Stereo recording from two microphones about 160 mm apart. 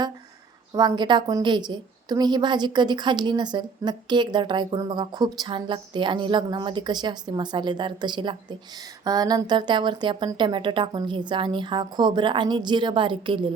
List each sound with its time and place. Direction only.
0.7 s a woman's voice: 25° right (ahead or behind)